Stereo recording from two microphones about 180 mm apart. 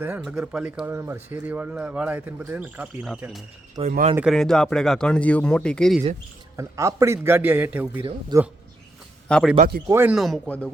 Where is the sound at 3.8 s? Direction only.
25° right (ahead or behind).